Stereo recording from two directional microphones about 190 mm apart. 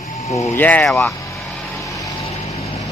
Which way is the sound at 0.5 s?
10° left (ahead or behind).